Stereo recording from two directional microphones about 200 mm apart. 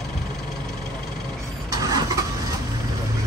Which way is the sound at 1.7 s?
20° right (ahead or behind).